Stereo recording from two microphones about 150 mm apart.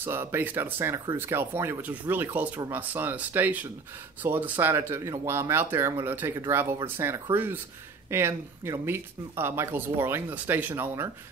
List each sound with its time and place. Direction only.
0.0 s speech: 15° right (ahead or behind)